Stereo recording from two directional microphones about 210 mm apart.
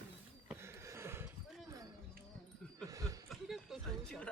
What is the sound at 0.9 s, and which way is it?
Horse, 10° right (ahead or behind).